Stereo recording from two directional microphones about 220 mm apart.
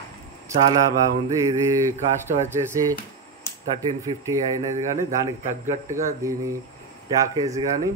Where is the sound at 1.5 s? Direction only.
10° right (ahead or behind).